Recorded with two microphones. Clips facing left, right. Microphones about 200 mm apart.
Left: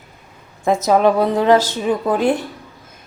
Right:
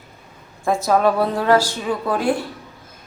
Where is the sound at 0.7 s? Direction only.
20° left (ahead or behind).